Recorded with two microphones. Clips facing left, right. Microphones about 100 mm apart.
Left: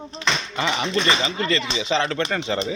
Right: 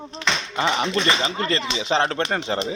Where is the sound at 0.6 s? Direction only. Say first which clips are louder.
Right 3 dB; 35° right (ahead or behind).